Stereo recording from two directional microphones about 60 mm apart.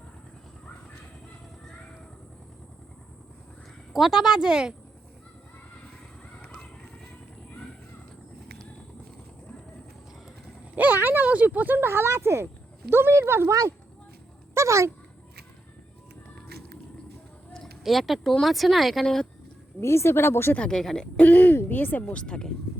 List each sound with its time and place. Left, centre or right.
3.9 s speech: centre
6.4 s vehicle: centre
10.8 s a sound: right
11.8 s speech: right
13.5 s speech: right
14.5 s speech: right
17.8 s speech: centre
19.0 s speech: centre
19.8 s speech: left
20.6 s speech: centre
21.2 s speech: left
22.0 s speech: centre